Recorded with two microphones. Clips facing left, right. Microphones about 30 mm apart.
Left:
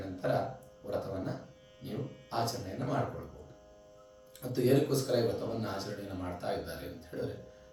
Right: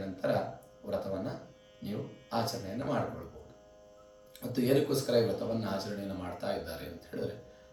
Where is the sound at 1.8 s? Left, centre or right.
Centre.